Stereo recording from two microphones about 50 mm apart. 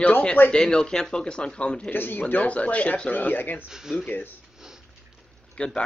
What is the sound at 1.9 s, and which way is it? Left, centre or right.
A man's voice, left.